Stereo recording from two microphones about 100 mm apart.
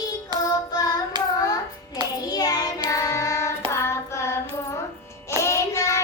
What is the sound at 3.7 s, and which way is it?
Hands, 30° left (ahead or behind).